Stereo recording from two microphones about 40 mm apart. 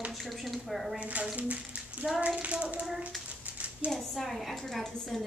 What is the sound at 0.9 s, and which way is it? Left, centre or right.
A child's voice, right.